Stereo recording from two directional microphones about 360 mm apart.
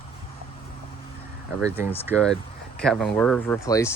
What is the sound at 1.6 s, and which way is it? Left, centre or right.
Speech, centre.